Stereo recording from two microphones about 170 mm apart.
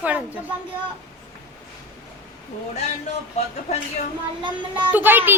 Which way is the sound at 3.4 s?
40° left (ahead or behind).